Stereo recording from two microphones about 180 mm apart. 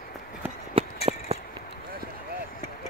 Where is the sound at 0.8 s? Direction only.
30° right (ahead or behind).